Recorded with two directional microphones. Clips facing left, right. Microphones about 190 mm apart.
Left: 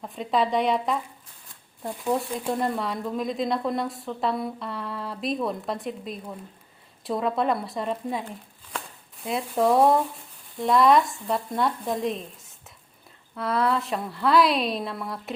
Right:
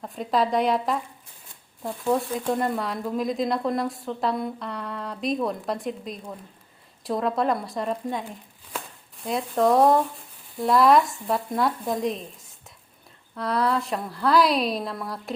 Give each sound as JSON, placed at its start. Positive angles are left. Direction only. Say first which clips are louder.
{"t": 0.0, "sound": "speech", "louder": "right 1 dB", "side_deg": 0}